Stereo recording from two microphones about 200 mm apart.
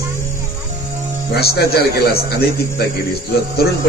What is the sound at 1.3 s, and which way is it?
A man's voice, 55° left (ahead or behind).